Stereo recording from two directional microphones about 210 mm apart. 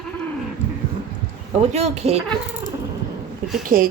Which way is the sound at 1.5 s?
30° right (ahead or behind).